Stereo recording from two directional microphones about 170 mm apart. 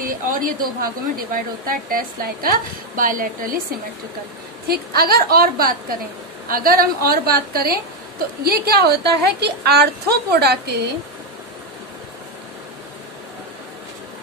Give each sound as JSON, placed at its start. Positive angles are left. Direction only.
{"t": 0.0, "sound": "a woman's voice", "side_deg": -55}
{"t": 4.6, "sound": "a woman's voice", "side_deg": -65}